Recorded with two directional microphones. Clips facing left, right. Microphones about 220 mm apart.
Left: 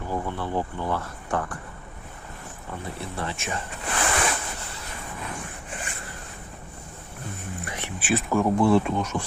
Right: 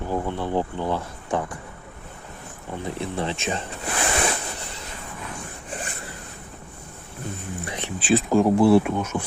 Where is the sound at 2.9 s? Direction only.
20° right (ahead or behind).